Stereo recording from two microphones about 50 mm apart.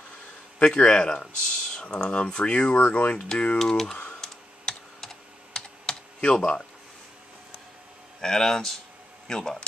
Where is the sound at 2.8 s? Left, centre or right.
Left.